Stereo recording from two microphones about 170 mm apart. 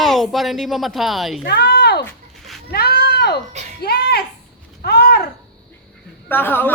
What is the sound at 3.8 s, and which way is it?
Speech, 70° left (ahead or behind).